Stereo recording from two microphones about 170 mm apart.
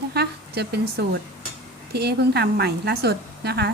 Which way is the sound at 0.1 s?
70° right (ahead or behind).